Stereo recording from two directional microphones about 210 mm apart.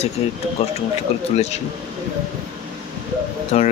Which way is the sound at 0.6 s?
30° left (ahead or behind).